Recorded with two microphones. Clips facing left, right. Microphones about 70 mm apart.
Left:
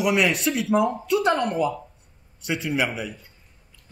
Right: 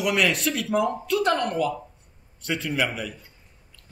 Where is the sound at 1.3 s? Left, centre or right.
Centre.